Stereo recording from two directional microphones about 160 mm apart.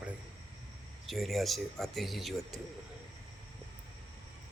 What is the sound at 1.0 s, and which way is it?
Speech, centre (ahead or behind).